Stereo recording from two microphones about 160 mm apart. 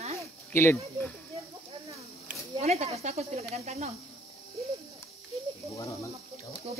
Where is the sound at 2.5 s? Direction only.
40° right (ahead or behind).